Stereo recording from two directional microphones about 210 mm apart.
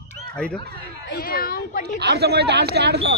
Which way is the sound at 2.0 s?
50° right (ahead or behind).